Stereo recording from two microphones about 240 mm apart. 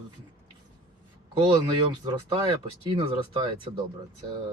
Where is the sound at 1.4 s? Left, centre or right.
Centre.